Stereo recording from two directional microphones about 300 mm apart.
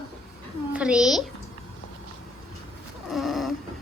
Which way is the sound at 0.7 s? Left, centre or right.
Centre.